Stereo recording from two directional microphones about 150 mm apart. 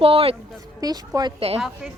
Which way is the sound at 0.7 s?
25° right (ahead or behind).